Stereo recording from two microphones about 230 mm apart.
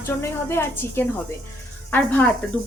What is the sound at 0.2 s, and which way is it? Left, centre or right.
Speech, centre.